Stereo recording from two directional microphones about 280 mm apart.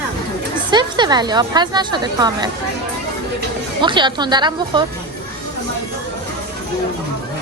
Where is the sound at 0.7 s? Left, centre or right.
Centre.